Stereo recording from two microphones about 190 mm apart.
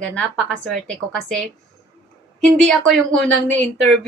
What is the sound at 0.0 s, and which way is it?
Speech, 5° left (ahead or behind).